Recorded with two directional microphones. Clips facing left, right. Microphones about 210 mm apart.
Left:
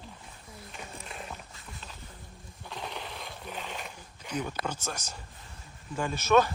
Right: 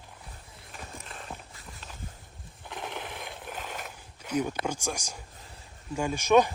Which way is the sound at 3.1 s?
15° right (ahead or behind).